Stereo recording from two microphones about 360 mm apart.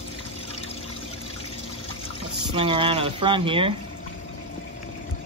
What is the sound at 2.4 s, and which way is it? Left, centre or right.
Speech, centre.